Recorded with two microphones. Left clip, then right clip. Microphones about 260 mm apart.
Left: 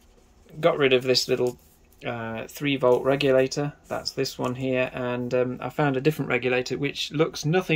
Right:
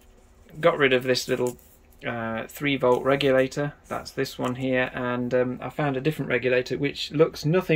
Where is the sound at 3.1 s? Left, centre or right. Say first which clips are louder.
Even; left.